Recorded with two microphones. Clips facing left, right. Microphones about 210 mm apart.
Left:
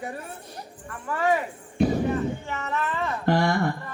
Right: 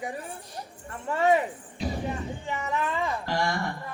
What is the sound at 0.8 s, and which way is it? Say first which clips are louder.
Keys jangling: right 1 dB; 25° right (ahead or behind).